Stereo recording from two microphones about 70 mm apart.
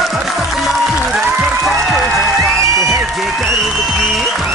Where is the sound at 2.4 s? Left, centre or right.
Right.